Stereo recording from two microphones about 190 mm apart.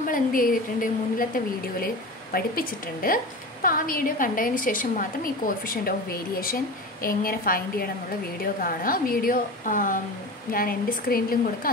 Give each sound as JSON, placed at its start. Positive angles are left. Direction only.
{"t": 0.1, "sound": "a woman's voice", "side_deg": 45}